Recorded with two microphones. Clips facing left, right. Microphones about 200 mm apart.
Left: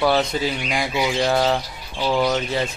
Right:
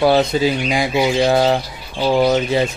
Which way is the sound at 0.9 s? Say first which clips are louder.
Right 5 dB; 30° right (ahead or behind).